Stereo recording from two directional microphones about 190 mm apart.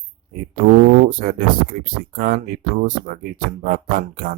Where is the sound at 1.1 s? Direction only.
50° right (ahead or behind).